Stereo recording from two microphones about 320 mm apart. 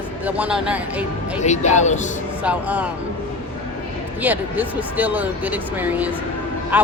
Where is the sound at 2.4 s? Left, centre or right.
Centre.